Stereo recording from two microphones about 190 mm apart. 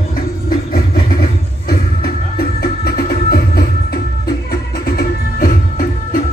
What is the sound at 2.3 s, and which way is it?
Music, 55° left (ahead or behind).